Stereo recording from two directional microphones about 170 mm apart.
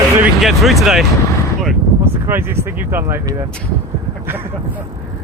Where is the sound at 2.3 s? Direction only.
15° right (ahead or behind).